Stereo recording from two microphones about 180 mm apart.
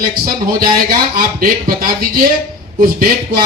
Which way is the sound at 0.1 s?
50° right (ahead or behind).